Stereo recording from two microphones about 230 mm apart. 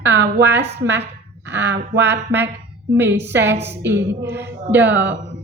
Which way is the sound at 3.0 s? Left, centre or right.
Right.